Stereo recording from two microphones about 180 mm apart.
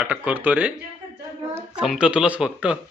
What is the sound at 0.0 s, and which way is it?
Speech, 5° right (ahead or behind).